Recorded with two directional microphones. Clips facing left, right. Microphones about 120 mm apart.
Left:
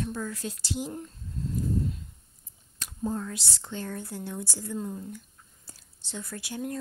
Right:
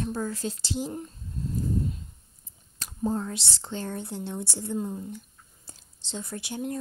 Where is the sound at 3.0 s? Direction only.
30° right (ahead or behind).